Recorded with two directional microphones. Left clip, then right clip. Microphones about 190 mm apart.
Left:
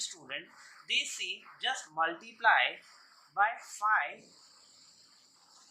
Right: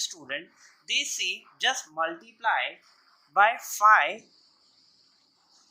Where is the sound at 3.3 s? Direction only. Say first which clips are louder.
Right 9 dB; 45° right (ahead or behind).